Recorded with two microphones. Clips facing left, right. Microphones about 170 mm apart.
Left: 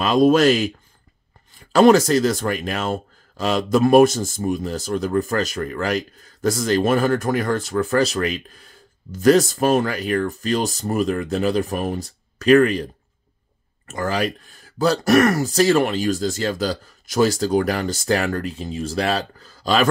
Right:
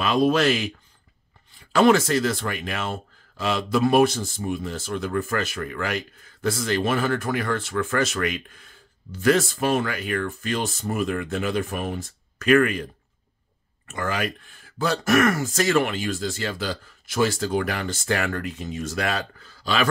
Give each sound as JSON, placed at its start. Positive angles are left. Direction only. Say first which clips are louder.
{"t": 0.0, "sound": "speech", "louder": "left 5 dB", "side_deg": 40}
{"t": 13.8, "sound": "speech", "louder": "left 4 dB", "side_deg": 35}